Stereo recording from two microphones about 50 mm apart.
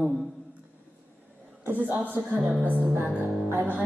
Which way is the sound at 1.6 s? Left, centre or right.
Right.